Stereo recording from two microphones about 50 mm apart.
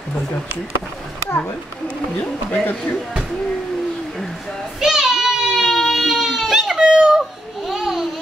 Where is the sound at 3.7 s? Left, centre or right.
Centre.